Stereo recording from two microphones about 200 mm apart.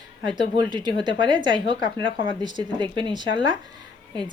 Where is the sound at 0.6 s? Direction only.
20° right (ahead or behind).